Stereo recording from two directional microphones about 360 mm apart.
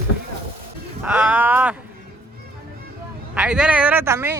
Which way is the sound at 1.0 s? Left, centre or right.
Centre.